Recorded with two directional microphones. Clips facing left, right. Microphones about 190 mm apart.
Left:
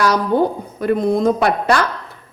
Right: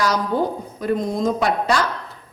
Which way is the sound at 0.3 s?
60° left (ahead or behind).